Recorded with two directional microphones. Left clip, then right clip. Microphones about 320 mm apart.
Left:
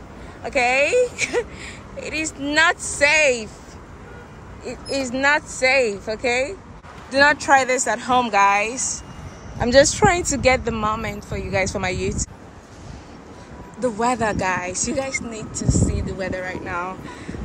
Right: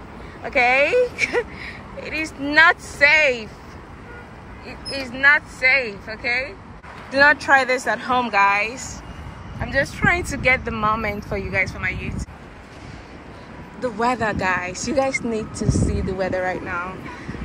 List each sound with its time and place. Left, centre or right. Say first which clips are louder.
0.4 s speech: right 1 dB; centre
4.6 s speech: left 4 dB; centre
9.7 s speech: left 8 dB; left
10.0 s speech: left 2 dB; centre
11.6 s speech: left 2 dB; centre
13.7 s speech: left 1 dB; centre